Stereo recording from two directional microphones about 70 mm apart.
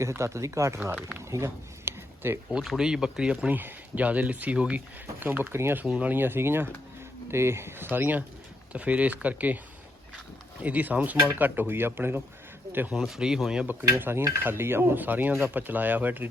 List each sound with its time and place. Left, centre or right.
0.0 s speech: right
1.2 s a sound: right
2.5 s speech: centre
3.5 s speech: right
5.2 s speech: right
5.8 s speech: centre
6.1 s speech: right
7.9 s speech: right
10.6 s speech: right
12.9 s speech: centre
14.0 s speech: right